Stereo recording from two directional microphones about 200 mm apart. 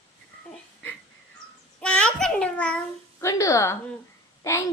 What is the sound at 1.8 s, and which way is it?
A child's voice, 5° left (ahead or behind).